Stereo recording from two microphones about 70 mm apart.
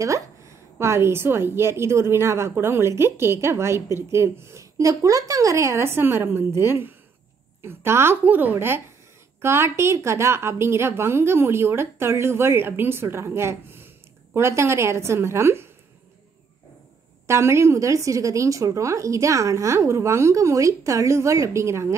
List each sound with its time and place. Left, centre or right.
0.0 s a woman's voice: right
8.2 s a woman's voice: right
17.3 s a woman's voice: right